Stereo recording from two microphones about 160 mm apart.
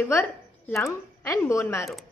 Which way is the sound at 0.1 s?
15° left (ahead or behind).